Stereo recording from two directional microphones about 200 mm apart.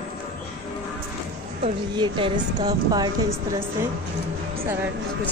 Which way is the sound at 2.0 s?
25° right (ahead or behind).